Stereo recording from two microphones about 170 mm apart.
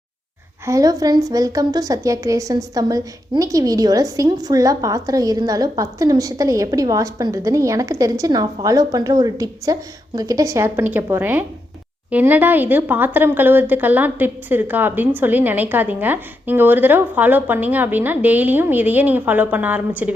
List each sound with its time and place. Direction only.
0.6 s a woman's voice: 20° right (ahead or behind)